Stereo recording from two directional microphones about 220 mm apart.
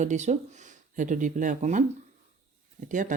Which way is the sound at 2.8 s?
35° right (ahead or behind).